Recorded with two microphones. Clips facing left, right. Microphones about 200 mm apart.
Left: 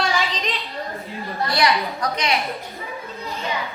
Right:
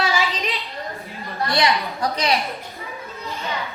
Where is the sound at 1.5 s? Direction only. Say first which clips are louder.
Even; 30° right (ahead or behind).